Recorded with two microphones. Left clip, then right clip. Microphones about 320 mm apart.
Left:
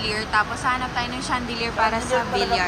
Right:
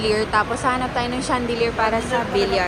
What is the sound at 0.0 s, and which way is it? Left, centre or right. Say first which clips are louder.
A woman's voice: right 3 dB; centre.